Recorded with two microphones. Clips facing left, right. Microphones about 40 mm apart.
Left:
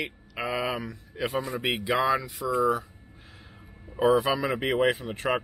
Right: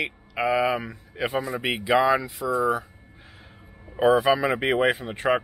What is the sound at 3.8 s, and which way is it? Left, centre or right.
Speech, centre.